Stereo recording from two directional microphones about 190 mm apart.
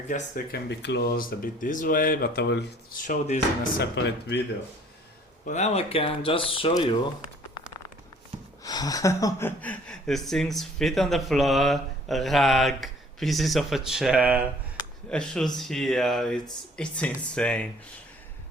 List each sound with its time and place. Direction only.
0.1 s speech: 50° left (ahead or behind)
0.7 s speech: 65° left (ahead or behind)
3.0 s speech: 40° left (ahead or behind)
3.8 s speech: 65° left (ahead or behind)
5.5 s speech: 35° left (ahead or behind)
8.6 s speech: 20° left (ahead or behind); by 14.4 s 10° right (ahead or behind)
15.1 s speech: 5° left (ahead or behind)